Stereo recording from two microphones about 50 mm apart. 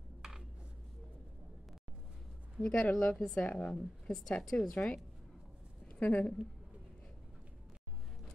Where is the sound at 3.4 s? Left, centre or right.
Centre.